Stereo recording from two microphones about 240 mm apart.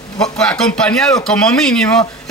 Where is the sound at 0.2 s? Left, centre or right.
Centre.